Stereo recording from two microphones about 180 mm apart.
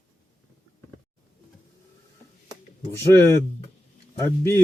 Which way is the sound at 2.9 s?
15° left (ahead or behind).